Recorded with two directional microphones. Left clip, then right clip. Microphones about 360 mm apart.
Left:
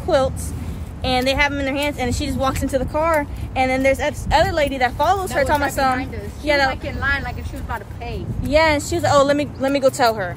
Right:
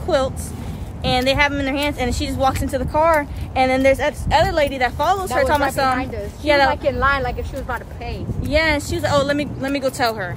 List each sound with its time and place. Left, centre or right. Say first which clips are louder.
0.1 s speech: left 1 dB; centre
6.7 s speech: right 4 dB; centre
8.5 s speech: left 2 dB; centre